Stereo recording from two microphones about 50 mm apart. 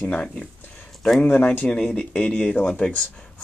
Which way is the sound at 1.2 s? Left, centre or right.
Left.